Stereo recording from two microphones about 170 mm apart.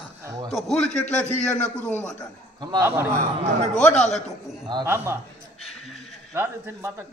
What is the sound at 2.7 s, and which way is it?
Speech, 15° right (ahead or behind).